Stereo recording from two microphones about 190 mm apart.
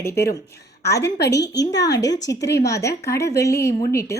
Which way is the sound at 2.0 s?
20° left (ahead or behind).